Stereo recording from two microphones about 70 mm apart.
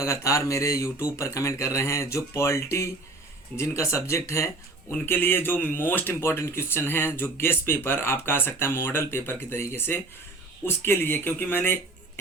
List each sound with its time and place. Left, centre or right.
0.0 s speech: left
5.0 s speech: left